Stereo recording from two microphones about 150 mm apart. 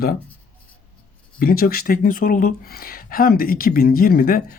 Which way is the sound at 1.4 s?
80° left.